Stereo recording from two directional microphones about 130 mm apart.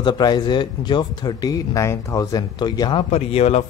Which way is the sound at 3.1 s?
55° left (ahead or behind).